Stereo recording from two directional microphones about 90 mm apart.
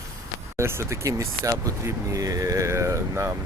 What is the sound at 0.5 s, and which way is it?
Speech, 30° right (ahead or behind).